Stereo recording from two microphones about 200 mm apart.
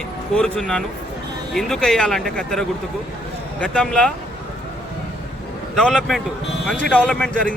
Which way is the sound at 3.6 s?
5° left (ahead or behind).